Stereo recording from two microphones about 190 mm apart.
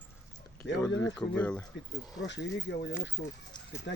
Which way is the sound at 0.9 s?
70° left (ahead or behind).